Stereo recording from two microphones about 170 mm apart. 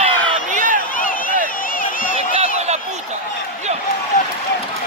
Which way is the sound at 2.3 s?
40° right (ahead or behind).